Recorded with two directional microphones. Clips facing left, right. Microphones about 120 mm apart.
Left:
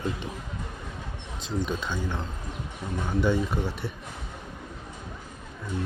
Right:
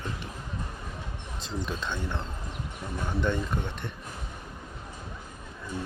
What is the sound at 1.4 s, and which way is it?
Speech, centre (ahead or behind).